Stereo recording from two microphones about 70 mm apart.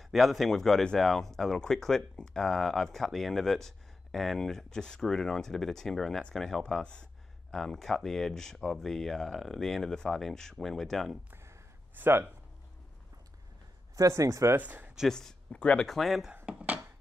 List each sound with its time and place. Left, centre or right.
0.0 s speech: centre
11.2 s a sound: right
11.9 s speech: right
13.9 s speech: right
14.6 s speech: right
15.0 s speech: centre
16.4 s a sound: centre